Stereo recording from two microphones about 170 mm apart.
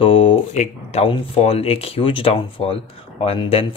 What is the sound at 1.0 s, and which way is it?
Speech, 35° left (ahead or behind).